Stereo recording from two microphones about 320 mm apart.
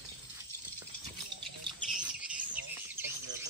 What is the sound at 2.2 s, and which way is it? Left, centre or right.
Bird, centre.